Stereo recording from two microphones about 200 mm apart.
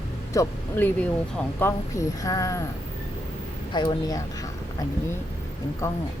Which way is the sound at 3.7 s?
20° left (ahead or behind).